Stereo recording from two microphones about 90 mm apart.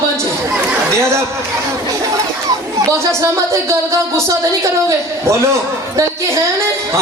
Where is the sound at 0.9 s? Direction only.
30° right (ahead or behind).